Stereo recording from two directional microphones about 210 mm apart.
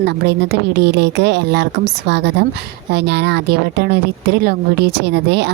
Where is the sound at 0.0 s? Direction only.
50° right (ahead or behind).